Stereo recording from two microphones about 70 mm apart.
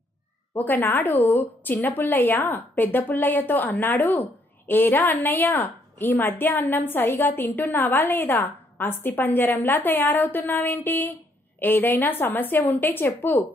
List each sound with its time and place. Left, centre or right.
0.6 s a woman's voice: left